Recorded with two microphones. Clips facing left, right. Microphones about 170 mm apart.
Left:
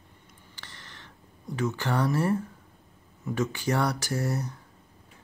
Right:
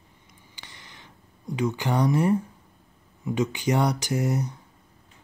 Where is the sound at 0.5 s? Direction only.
10° right (ahead or behind).